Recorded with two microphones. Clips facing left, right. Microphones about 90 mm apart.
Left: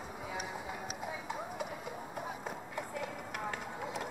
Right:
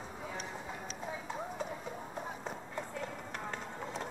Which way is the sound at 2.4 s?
5° left (ahead or behind).